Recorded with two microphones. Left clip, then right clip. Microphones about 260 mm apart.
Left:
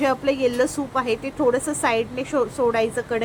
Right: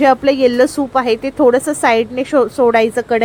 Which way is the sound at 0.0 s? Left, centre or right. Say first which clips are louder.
Right 9 dB; right.